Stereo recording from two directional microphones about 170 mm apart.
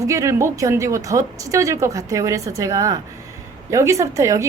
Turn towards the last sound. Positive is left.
turn(degrees=-15)  # may be behind; listen again after turning